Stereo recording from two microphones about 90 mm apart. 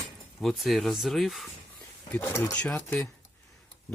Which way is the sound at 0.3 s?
Centre (ahead or behind).